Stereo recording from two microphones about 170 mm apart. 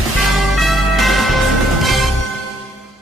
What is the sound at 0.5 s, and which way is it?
Music, centre (ahead or behind).